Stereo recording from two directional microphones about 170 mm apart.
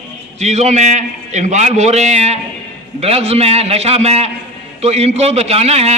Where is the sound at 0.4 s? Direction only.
40° right (ahead or behind).